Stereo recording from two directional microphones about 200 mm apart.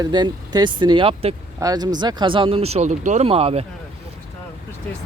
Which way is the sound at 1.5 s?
20° right (ahead or behind).